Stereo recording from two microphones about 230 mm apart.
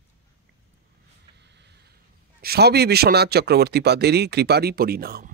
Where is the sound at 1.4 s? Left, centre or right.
Right.